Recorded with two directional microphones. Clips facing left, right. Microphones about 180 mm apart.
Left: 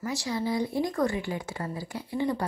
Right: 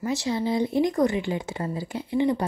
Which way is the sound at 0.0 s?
25° right (ahead or behind).